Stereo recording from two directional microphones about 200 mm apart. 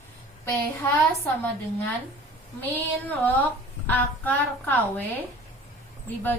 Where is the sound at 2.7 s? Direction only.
10° left (ahead or behind).